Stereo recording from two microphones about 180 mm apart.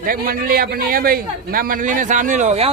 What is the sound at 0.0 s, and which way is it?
A man's voice, 55° right (ahead or behind).